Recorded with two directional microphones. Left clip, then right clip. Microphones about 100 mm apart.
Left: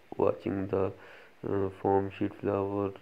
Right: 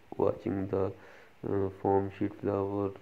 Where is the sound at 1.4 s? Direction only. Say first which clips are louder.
Left 1 dB; 10° left (ahead or behind).